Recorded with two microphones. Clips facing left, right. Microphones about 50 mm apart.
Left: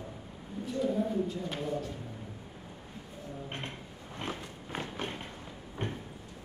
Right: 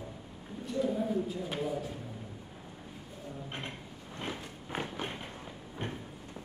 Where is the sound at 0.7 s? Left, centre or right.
Centre.